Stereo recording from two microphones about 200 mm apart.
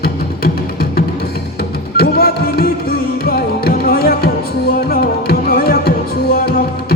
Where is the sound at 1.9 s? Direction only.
50° left (ahead or behind).